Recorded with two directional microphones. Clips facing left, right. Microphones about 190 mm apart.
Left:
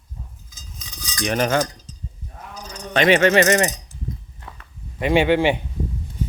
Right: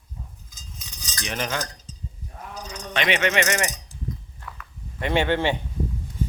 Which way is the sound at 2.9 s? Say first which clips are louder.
Left 8 dB; 40° left (ahead or behind).